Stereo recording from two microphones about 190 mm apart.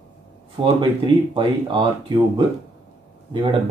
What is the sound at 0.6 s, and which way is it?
Speech, 25° right (ahead or behind).